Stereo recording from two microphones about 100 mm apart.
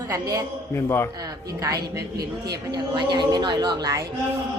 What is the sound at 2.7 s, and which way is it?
A woman's voice, 50° right (ahead or behind).